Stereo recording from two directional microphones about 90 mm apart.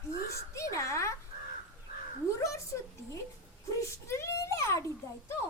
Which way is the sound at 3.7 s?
35° left (ahead or behind).